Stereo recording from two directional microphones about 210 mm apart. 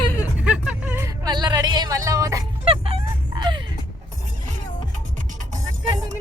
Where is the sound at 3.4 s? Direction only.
20° right (ahead or behind).